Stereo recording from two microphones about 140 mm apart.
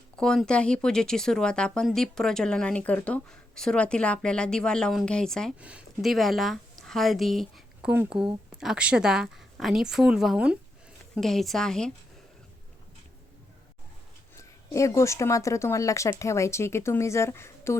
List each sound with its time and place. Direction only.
0.2 s speech: 5° left (ahead or behind)
5.5 s a woman's voice: 10° right (ahead or behind)
14.3 s speech: 20° left (ahead or behind)